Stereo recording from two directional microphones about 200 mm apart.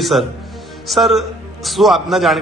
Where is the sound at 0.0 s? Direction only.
Centre (ahead or behind).